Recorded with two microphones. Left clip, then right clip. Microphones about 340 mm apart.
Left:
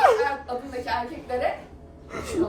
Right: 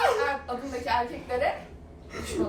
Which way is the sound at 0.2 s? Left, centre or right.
Centre.